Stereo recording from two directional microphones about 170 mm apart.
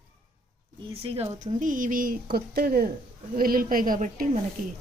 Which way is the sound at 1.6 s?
50° right (ahead or behind).